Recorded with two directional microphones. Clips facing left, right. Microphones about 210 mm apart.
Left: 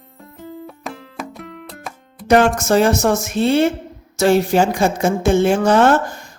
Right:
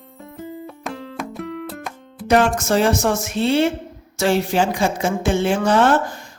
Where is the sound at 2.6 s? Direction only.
45° left (ahead or behind).